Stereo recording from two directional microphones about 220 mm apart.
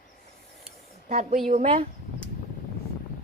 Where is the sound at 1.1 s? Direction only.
30° right (ahead or behind).